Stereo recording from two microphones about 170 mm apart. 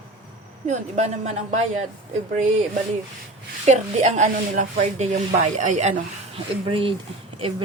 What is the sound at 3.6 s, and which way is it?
Speech, 40° right (ahead or behind).